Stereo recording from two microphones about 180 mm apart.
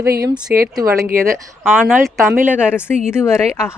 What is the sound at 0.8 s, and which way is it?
Speech, 15° right (ahead or behind).